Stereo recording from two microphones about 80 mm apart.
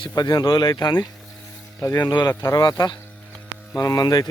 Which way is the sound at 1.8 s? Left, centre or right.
Left.